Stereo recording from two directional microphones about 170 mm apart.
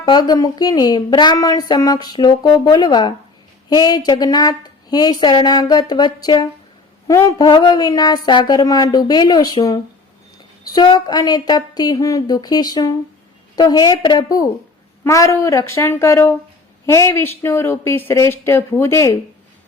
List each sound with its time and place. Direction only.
0.0 s a woman's voice: 25° left (ahead or behind)